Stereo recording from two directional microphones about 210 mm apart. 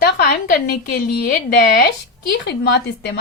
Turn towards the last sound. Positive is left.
turn(degrees=55)  # may be behind; listen again after turning